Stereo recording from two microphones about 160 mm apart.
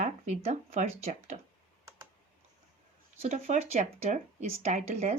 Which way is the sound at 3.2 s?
45° right (ahead or behind).